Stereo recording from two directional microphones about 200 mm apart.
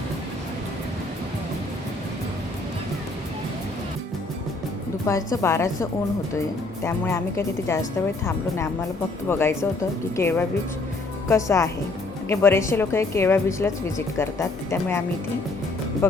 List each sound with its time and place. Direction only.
5.0 s speech: 15° left (ahead or behind)